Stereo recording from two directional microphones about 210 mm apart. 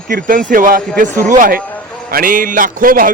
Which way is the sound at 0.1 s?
40° right (ahead or behind).